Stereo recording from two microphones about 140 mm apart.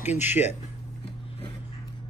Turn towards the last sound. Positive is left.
turn(degrees=55)  # may be behind; listen again after turning